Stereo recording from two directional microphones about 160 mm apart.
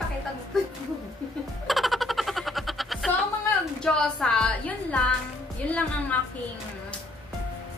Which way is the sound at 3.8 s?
5° left (ahead or behind).